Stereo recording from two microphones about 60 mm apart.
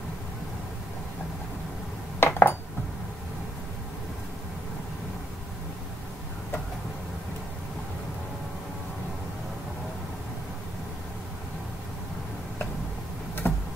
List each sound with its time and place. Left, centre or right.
2.1 s dishes: left
13.4 s computer keyboard: left